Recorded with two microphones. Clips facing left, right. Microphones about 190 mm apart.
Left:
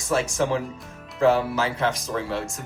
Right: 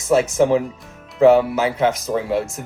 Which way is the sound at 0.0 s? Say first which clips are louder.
Right 8 dB; 20° right (ahead or behind).